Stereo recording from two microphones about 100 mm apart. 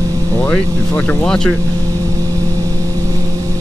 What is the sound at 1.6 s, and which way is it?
Vehicle, 35° right (ahead or behind).